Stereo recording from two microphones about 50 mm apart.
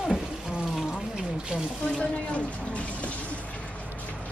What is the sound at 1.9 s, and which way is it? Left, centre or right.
Speech, left.